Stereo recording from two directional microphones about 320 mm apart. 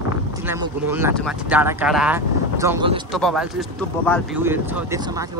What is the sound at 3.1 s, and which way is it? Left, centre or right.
Speech, centre.